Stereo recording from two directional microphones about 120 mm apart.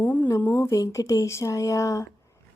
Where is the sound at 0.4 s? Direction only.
15° left (ahead or behind).